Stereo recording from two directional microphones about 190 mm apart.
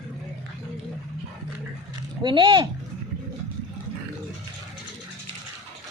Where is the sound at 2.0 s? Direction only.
25° right (ahead or behind).